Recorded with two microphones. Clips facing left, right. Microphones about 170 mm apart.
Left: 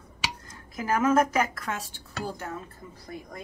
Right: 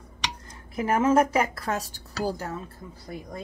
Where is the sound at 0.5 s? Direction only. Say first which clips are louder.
Right 3 dB; 30° right (ahead or behind).